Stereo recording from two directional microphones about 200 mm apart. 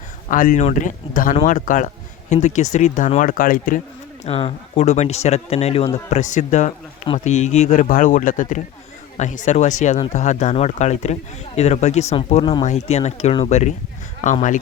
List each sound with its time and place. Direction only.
0.3 s speech: 40° left (ahead or behind)
4.3 s speech: 30° left (ahead or behind)